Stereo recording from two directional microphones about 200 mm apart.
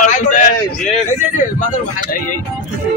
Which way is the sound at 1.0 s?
35° left (ahead or behind).